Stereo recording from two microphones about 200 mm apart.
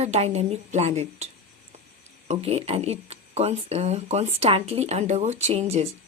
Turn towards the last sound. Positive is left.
turn(degrees=-30)  # may be behind; listen again after turning